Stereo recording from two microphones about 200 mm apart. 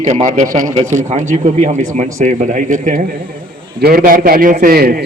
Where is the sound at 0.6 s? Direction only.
15° right (ahead or behind).